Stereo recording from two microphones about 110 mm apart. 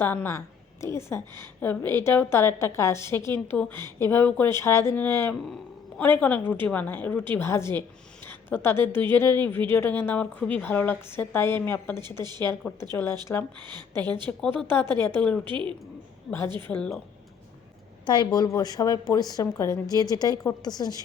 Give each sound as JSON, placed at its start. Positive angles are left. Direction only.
{"t": 0.0, "sound": "a woman's voice", "side_deg": 20}
{"t": 11.9, "sound": "a woman's voice", "side_deg": -40}
{"t": 12.9, "sound": "a woman's voice", "side_deg": 25}
{"t": 14.3, "sound": "a woman's voice", "side_deg": 15}
{"t": 15.4, "sound": "a woman's voice", "side_deg": -45}
{"t": 16.6, "sound": "a woman's voice", "side_deg": 20}
{"t": 18.0, "sound": "a woman's voice", "side_deg": 45}